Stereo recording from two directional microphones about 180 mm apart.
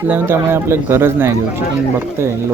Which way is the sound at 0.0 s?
10° right (ahead or behind).